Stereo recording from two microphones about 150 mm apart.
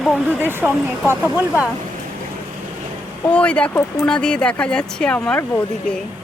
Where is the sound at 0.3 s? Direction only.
10° right (ahead or behind).